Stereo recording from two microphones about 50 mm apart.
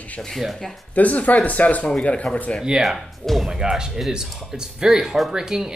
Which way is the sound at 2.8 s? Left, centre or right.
Centre.